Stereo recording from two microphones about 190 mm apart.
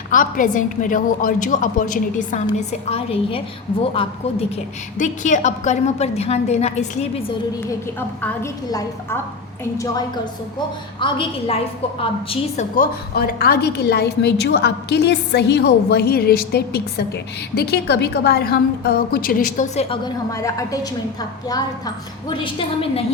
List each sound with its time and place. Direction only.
0.1 s a woman's voice: 45° left (ahead or behind)
4.9 s a woman's voice: 40° left (ahead or behind)
7.9 s a woman's voice: 10° left (ahead or behind)
11.0 s a woman's voice: 30° left (ahead or behind)
12.3 s a woman's voice: 40° left (ahead or behind)
20.3 s a woman's voice: 15° left (ahead or behind)